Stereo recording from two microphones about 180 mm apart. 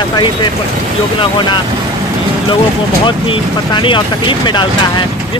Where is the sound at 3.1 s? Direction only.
25° left (ahead or behind).